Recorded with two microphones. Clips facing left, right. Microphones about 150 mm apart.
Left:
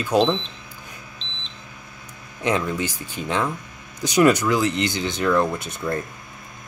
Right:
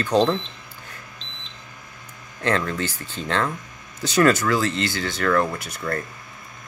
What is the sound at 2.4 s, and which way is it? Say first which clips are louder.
Speech: left 1 dB; 15° left (ahead or behind).